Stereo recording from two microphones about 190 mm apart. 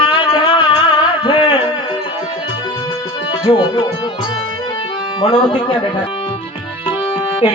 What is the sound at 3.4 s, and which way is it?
Speech, 25° left (ahead or behind).